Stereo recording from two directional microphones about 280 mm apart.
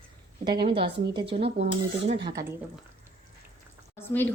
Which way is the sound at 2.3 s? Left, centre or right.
Centre.